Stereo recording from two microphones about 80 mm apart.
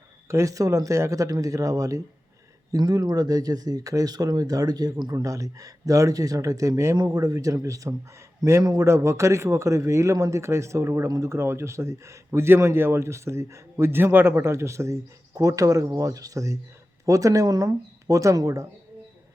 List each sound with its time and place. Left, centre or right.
0.3 s speech: right
2.7 s speech: right
5.1 s speech: right
6.9 s speech: right
8.9 s a man's voice: right